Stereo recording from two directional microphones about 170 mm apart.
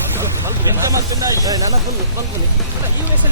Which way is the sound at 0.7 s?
20° right (ahead or behind).